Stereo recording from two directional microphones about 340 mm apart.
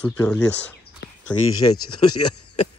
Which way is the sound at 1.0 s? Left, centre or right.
Left.